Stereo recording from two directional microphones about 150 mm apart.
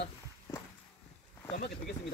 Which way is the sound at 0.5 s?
25° left (ahead or behind).